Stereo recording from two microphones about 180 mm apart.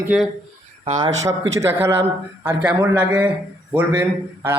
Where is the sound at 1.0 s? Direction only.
20° right (ahead or behind).